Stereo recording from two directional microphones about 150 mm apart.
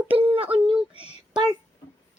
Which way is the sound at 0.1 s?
40° right (ahead or behind).